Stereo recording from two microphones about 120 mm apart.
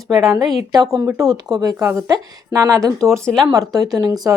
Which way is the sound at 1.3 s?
35° right (ahead or behind).